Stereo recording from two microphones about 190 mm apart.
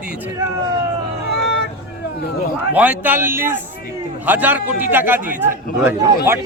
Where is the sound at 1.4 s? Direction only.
60° left (ahead or behind).